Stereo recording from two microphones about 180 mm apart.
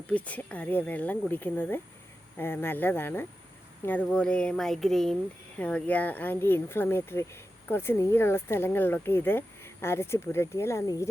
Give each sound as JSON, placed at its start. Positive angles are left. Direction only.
{"t": 0.1, "sound": "speech", "side_deg": 5}
{"t": 4.0, "sound": "a sound", "side_deg": 5}
{"t": 5.5, "sound": "speech", "side_deg": 5}